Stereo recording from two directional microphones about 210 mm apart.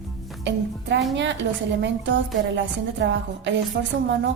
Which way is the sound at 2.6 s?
60° right (ahead or behind).